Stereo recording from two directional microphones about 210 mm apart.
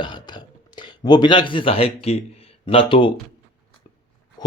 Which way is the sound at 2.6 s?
25° left (ahead or behind).